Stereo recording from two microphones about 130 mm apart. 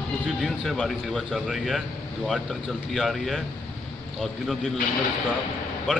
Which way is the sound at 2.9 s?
Centre (ahead or behind).